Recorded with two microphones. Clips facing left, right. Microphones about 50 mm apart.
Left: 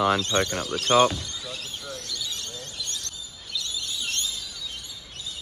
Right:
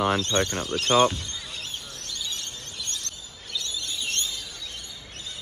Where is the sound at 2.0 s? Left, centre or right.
Right.